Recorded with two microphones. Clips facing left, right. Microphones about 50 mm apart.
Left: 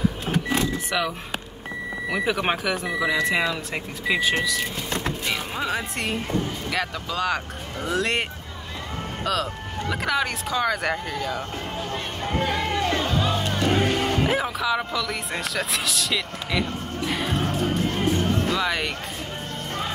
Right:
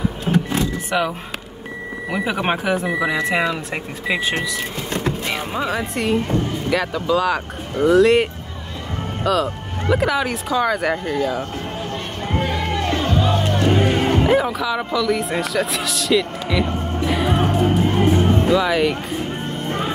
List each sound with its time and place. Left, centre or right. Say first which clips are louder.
0.9 s speech: right 5 dB; right
5.5 s speech: right 4 dB; centre
13.8 s music: right 5 dB; centre
14.3 s speech: right 5 dB; centre
17.6 s music: right 7 dB; right
18.5 s speech: right 8 dB; centre